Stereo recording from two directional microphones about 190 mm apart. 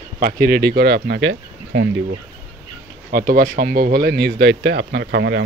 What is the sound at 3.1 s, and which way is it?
Speech, 50° right (ahead or behind).